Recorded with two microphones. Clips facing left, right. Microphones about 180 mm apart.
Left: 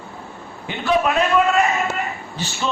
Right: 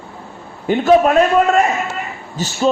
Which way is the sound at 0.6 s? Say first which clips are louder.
Right 8 dB; 45° right (ahead or behind).